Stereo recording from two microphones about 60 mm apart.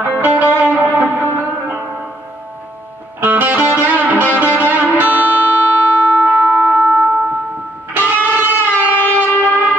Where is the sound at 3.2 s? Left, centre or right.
Right.